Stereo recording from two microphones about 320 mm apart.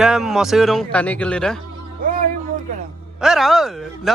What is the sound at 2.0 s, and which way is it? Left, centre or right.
Music, right.